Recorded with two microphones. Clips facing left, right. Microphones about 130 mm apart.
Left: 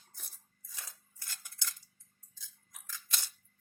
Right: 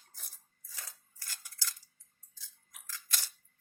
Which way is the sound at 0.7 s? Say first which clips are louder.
Even; 20° left (ahead or behind).